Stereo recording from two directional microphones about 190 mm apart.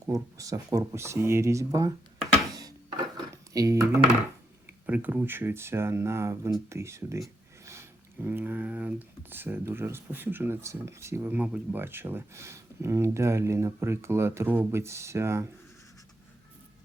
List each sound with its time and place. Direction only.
0.0 s speech: 15° right (ahead or behind)
2.5 s a sound: 20° right (ahead or behind)
3.5 s speech: 15° right (ahead or behind)